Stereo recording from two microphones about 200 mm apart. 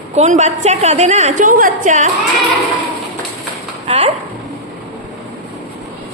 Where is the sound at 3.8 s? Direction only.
30° right (ahead or behind).